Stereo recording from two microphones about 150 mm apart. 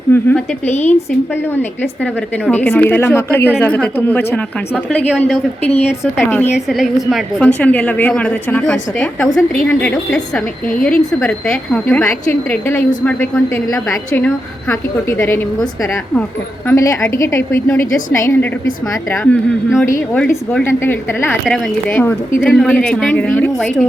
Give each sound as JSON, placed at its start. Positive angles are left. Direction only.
{"t": 0.1, "sound": "a woman's voice", "side_deg": 15}
{"t": 0.7, "sound": "a woman's voice", "side_deg": 50}
{"t": 2.5, "sound": "a woman's voice", "side_deg": 10}
{"t": 6.5, "sound": "a woman's voice", "side_deg": 0}
{"t": 16.6, "sound": "a woman's voice", "side_deg": 20}
{"t": 21.4, "sound": "a woman's voice", "side_deg": 5}